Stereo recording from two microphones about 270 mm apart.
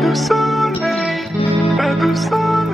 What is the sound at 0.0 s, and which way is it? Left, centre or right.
Music, centre.